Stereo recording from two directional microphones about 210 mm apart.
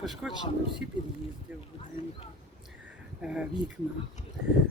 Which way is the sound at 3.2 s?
5° right (ahead or behind).